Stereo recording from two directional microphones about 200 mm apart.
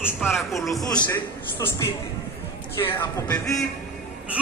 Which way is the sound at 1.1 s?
10° left (ahead or behind).